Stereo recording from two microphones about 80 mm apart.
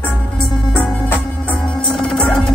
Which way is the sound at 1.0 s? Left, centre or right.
Left.